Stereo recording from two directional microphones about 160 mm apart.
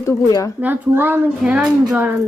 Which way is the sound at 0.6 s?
10° right (ahead or behind).